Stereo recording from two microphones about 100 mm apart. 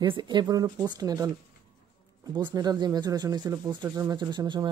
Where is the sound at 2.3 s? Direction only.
45° right (ahead or behind).